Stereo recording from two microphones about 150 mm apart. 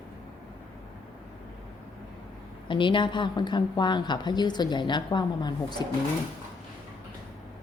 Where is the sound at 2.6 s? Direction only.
35° left (ahead or behind).